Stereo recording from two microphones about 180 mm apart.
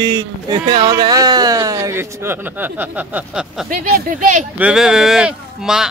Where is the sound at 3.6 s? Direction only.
50° right (ahead or behind).